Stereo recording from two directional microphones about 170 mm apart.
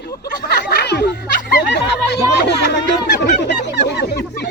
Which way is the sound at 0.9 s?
75° left (ahead or behind).